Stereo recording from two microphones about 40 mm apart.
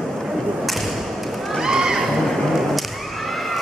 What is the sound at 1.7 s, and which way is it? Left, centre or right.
Horse, centre.